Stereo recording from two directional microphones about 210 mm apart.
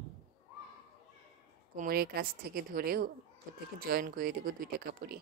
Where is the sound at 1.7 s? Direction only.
40° right (ahead or behind).